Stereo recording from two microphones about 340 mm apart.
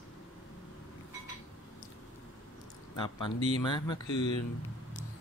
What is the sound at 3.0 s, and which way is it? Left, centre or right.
Speech, centre.